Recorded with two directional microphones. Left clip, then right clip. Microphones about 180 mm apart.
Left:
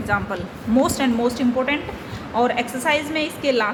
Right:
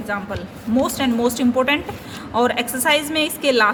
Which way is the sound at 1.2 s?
25° right (ahead or behind).